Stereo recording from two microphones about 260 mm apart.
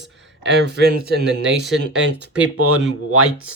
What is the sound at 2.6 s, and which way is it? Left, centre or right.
Speech, right.